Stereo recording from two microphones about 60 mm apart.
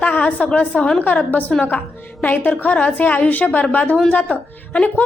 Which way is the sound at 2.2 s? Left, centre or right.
Left.